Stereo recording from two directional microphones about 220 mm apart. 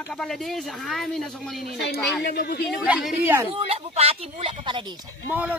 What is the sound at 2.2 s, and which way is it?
Speech, 45° left (ahead or behind).